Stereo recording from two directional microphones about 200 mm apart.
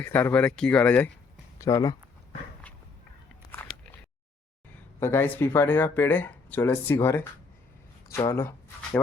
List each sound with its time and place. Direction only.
0.0 s speech: 10° left (ahead or behind)
4.9 s speech: 10° left (ahead or behind)